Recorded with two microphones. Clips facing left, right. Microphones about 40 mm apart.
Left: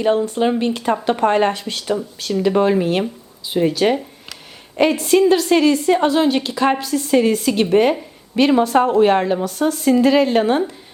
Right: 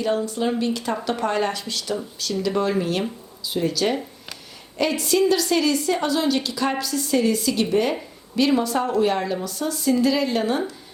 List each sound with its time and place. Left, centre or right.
0.0 s a woman's voice: left